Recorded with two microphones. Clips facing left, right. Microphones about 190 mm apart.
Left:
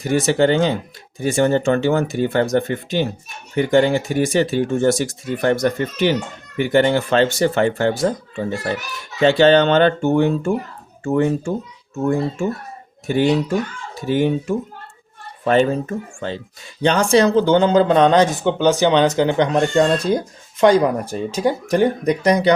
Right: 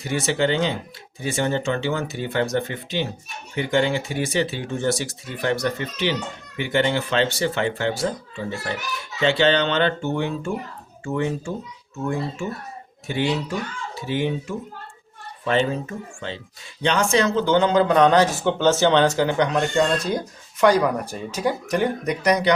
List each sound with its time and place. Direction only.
0.0 s speech: 45° left (ahead or behind)
9.2 s speech: 45° left (ahead or behind)
13.1 s speech: 45° left (ahead or behind); by 19.5 s 20° left (ahead or behind)
19.5 s speech: 35° left (ahead or behind)